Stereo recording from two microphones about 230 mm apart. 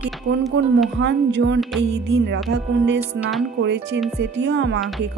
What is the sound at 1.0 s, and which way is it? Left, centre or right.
Speech, right.